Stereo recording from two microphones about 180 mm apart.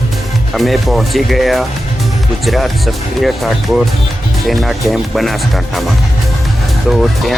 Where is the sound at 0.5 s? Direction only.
Centre (ahead or behind).